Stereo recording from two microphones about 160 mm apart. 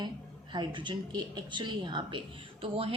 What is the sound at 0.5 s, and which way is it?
A man's voice, 30° right (ahead or behind).